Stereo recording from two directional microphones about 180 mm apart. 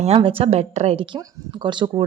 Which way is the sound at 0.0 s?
30° right (ahead or behind).